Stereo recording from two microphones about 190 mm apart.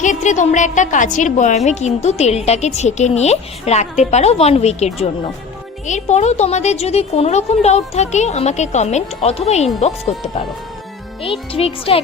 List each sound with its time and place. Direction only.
0.0 s speech: 40° left (ahead or behind)